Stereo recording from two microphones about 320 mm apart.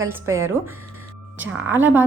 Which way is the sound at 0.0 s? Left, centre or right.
Centre.